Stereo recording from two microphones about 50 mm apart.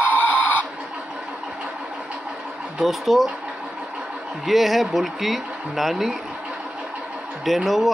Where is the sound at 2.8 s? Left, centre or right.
Centre.